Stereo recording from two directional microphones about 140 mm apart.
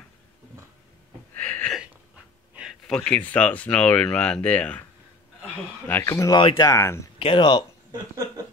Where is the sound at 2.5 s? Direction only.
Centre (ahead or behind).